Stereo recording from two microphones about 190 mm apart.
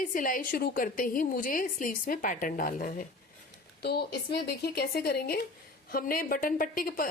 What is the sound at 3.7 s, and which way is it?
A woman's voice, 55° left (ahead or behind).